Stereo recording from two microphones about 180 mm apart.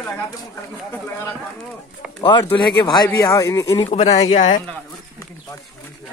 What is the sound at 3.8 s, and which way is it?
Speech, 35° left (ahead or behind).